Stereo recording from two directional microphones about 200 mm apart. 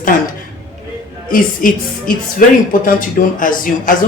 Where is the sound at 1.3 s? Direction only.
45° left (ahead or behind).